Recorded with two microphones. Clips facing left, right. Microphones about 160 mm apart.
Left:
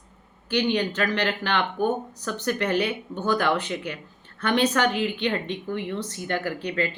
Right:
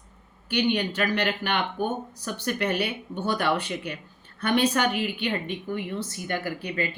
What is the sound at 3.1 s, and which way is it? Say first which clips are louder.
Speech: left 2 dB; 25° right (ahead or behind).